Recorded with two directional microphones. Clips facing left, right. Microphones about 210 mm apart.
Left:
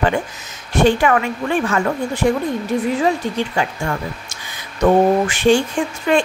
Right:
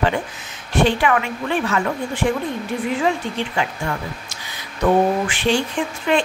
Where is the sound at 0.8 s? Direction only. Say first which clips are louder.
Left 5 dB; 45° left (ahead or behind).